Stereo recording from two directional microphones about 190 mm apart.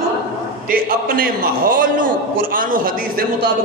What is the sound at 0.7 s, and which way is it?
A man's voice, 45° right (ahead or behind).